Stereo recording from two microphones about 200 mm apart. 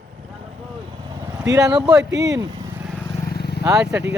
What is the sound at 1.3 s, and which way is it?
Speech, 15° right (ahead or behind).